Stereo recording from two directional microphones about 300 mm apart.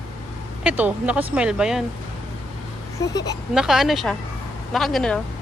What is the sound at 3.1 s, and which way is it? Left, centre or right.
Speech, centre.